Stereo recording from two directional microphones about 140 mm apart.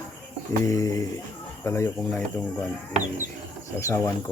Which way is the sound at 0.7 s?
25° left (ahead or behind).